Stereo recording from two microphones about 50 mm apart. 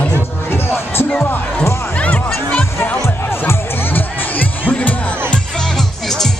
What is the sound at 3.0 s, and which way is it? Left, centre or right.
Music, left.